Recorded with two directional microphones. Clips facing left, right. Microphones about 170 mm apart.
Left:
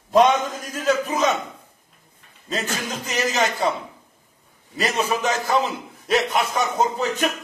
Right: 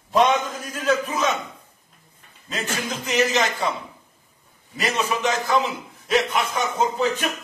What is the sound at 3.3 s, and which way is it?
Speech, 40° left (ahead or behind).